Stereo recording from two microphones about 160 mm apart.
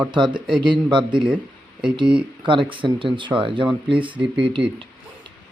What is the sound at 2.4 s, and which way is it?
Speech, 30° right (ahead or behind).